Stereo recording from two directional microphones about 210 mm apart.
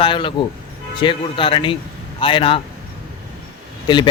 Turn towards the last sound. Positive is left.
turn(degrees=20)  # may be behind; listen again after turning